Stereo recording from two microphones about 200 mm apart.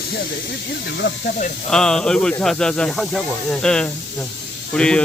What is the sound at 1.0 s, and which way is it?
Speech, 65° left (ahead or behind).